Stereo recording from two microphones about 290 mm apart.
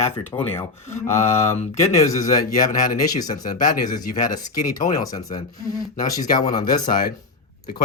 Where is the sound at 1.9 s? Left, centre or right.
Centre.